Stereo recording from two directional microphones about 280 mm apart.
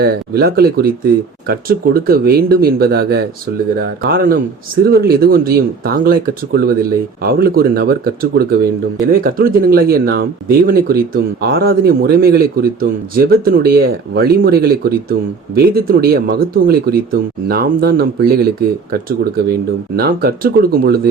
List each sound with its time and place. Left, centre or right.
0.0 s speech: right